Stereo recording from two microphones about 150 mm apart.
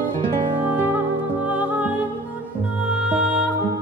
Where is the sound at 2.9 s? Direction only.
5° right (ahead or behind).